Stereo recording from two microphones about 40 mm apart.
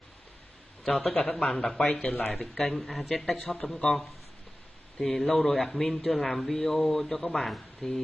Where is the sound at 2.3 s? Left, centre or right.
Centre.